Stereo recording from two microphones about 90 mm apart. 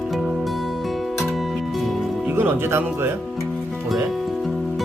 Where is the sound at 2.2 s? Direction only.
20° right (ahead or behind).